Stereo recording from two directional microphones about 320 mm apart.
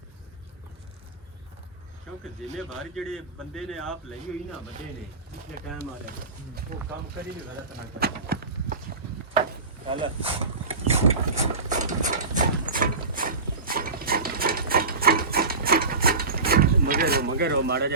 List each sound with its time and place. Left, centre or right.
2.9 s a man's voice: centre
5.5 s speech: right
7.9 s clip-clop: right
9.8 s a sound: centre